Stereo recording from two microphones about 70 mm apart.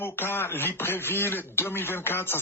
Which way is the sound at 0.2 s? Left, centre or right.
Left.